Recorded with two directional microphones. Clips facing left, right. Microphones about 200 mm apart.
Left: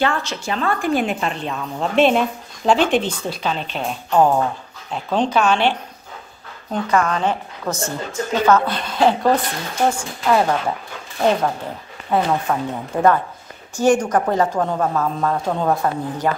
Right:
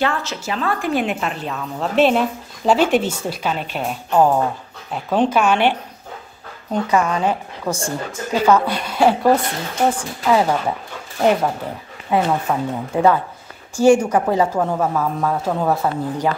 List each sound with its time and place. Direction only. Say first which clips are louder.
0.0 s a woman's voice: left 1 dB; centre (ahead or behind)
5.3 s a woman's voice: right 1 dB; 10° right (ahead or behind)
6.9 s a woman's voice: even; 10° right (ahead or behind)
12.1 s a woman's voice: right 1 dB; 10° right (ahead or behind)